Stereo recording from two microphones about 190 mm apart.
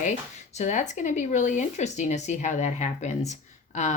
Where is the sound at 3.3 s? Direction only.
40° left (ahead or behind).